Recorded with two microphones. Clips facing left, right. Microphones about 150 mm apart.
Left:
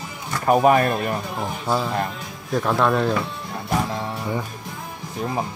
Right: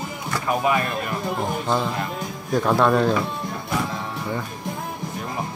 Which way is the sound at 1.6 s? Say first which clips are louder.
Left 5 dB; 5° left (ahead or behind).